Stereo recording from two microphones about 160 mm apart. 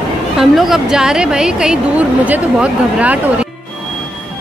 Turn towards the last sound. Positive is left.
turn(degrees=-10)  # may be behind; listen again after turning